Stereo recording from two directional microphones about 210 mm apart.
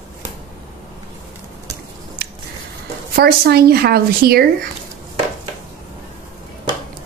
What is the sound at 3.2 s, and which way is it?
Speech, 45° right (ahead or behind).